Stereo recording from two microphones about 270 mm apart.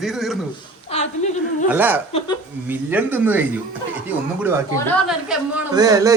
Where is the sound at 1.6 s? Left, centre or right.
Centre.